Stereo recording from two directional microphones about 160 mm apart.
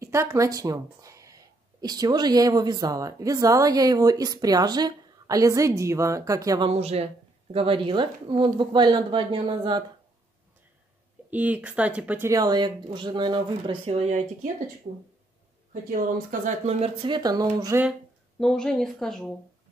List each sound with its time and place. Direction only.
0.0 s speech: 15° right (ahead or behind)
6.7 s speech: 40° right (ahead or behind)
11.2 s speech: 10° right (ahead or behind)
12.3 s speech: 25° right (ahead or behind)
13.9 s speech: 50° right (ahead or behind); by 17.8 s 20° right (ahead or behind)
18.4 s a woman's voice: 5° left (ahead or behind)